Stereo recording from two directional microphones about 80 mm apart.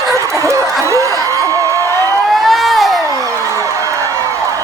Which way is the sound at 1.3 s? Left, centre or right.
Right.